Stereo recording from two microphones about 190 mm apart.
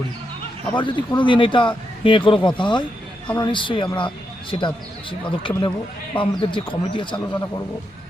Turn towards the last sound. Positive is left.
turn(degrees=25)  # may be behind; listen again after turning